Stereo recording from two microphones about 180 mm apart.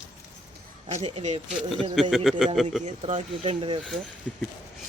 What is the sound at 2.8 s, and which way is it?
Speech, 35° right (ahead or behind).